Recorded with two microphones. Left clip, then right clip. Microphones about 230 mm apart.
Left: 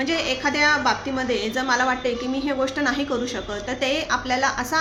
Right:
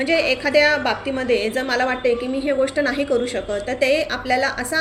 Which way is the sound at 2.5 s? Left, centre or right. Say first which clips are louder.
Right 4 dB; left.